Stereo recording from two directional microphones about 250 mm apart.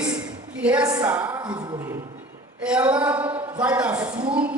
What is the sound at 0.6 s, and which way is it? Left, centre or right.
A woman's voice, centre.